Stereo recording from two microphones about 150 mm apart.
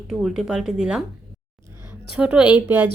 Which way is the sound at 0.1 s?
Centre (ahead or behind).